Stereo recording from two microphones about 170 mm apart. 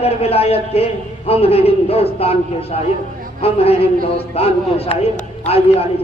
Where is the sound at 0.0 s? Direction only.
35° left (ahead or behind).